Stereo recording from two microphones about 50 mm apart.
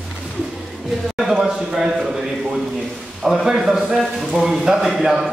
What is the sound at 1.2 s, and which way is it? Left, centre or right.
Speech, centre.